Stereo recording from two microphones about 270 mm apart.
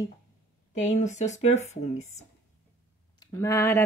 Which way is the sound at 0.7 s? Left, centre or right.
Left.